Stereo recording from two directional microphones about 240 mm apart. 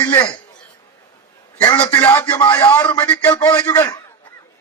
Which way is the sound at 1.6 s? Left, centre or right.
Centre.